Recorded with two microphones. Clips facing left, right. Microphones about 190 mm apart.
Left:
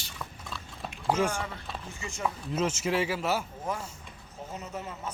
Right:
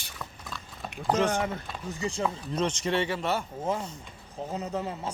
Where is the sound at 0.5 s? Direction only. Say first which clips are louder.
Right 1 dB; centre (ahead or behind).